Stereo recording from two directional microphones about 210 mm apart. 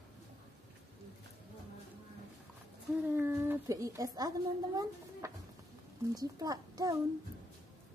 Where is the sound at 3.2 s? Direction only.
10° right (ahead or behind).